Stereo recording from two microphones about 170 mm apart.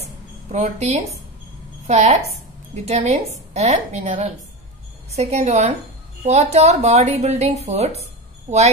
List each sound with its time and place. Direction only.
0.5 s speech: 40° right (ahead or behind)